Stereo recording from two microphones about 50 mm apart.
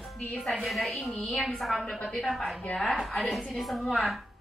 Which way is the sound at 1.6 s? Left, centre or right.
Centre.